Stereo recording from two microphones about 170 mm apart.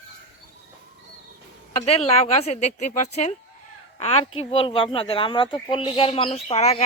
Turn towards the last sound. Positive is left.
turn(degrees=40)  # may be behind; listen again after turning